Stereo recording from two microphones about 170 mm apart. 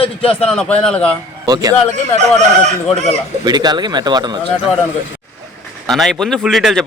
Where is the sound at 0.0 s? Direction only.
35° left (ahead or behind).